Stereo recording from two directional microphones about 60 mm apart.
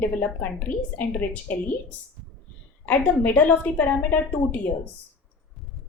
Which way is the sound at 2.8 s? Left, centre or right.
Left.